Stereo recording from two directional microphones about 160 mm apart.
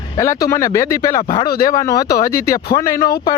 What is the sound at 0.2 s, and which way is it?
Speech, 20° left (ahead or behind).